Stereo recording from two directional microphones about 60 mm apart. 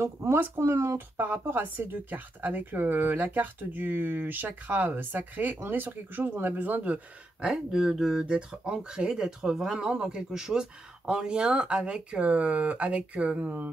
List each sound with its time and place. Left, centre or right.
0.0 s speech: right
0.9 s speech: right
7.4 s speech: centre; by 13.7 s right